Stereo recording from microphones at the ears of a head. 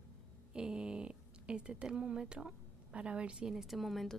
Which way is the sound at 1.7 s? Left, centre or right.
Right.